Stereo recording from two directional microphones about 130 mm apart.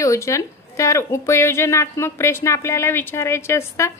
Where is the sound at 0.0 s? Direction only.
25° left (ahead or behind).